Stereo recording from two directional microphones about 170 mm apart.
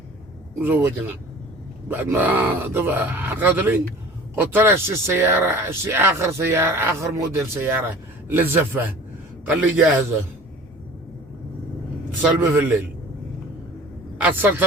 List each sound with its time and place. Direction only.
0.6 s speech: 10° right (ahead or behind)
12.2 s speech: 10° right (ahead or behind)
14.2 s speech: 10° right (ahead or behind)